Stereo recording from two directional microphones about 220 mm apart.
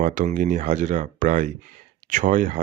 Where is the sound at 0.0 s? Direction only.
35° right (ahead or behind).